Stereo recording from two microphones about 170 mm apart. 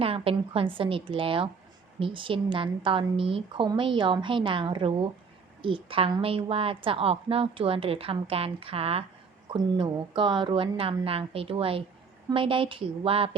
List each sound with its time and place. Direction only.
0.0 s a woman's voice: 35° right (ahead or behind)